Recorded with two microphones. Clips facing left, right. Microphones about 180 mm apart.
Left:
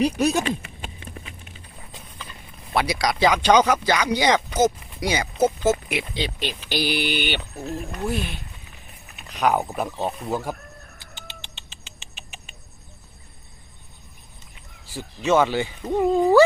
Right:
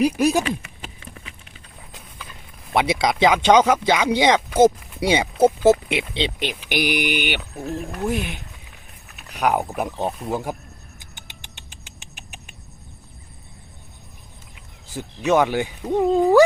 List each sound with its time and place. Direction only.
0.0 s speech: 10° right (ahead or behind)
0.4 s a sound: 30° left (ahead or behind)
1.9 s clip-clop: 5° right (ahead or behind)
2.7 s speech: 25° right (ahead or behind)
4.4 s speech: 5° right (ahead or behind)
4.6 s speech: 25° right (ahead or behind); by 8.0 s 5° right (ahead or behind)
8.0 s speech: 15° right (ahead or behind)
14.9 s speech: 15° right (ahead or behind)
15.9 s speech: centre (ahead or behind)